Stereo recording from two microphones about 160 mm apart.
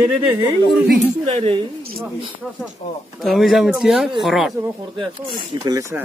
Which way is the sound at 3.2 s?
Centre (ahead or behind).